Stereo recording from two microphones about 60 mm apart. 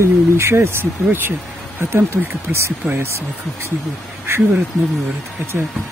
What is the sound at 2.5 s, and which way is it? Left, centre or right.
Speech, right.